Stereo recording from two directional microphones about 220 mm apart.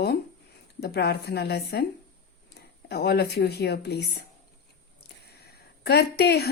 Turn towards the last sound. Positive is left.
turn(degrees=45)  # may be behind; listen again after turning